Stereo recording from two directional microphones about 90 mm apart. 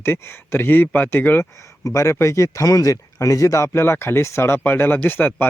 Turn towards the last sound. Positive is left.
turn(degrees=25)  # may be behind; listen again after turning